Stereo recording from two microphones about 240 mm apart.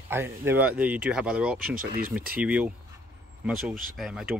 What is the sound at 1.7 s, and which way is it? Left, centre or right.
Speech, right.